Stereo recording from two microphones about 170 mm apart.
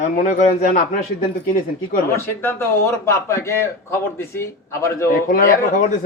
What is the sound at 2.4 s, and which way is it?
A man's voice, 15° left (ahead or behind).